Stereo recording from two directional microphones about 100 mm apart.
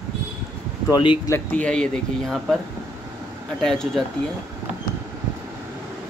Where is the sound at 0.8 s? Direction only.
50° left (ahead or behind).